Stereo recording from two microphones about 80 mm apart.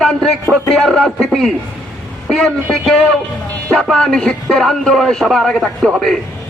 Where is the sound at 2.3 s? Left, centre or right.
Centre.